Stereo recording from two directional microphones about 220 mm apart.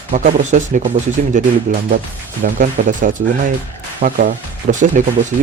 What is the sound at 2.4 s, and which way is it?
Speech, 35° right (ahead or behind).